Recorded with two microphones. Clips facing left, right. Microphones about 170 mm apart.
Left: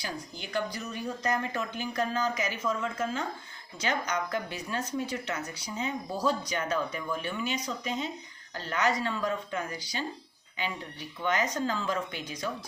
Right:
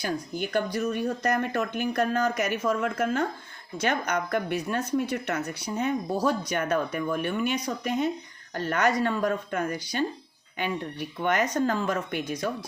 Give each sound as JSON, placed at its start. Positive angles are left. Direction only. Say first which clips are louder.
{"t": 0.0, "sound": "speech", "louder": "right 9 dB", "side_deg": -55}